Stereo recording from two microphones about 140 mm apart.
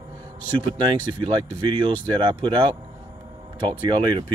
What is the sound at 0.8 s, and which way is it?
Speech, 35° right (ahead or behind).